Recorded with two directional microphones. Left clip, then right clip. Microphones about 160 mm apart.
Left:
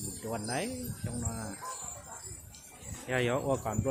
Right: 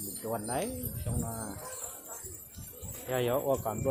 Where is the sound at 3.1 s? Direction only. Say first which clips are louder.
Right 1 dB; 20° left (ahead or behind).